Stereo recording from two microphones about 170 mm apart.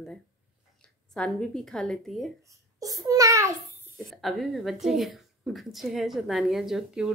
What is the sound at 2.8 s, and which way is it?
Speech, 20° right (ahead or behind).